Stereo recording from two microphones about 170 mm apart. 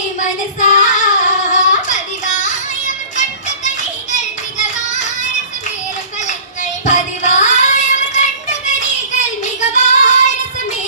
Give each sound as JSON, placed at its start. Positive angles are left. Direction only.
{"t": 0.2, "sound": "child singing", "side_deg": 45}
{"t": 4.1, "sound": "child singing", "side_deg": 45}
{"t": 6.8, "sound": "child singing", "side_deg": 45}